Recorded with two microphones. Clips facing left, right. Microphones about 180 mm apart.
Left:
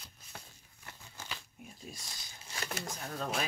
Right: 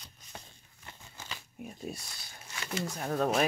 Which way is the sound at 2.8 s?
60° right (ahead or behind).